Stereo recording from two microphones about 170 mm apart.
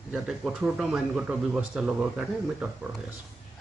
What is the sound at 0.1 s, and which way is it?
Speech, 5° right (ahead or behind).